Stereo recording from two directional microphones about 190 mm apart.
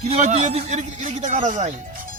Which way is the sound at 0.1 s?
35° right (ahead or behind).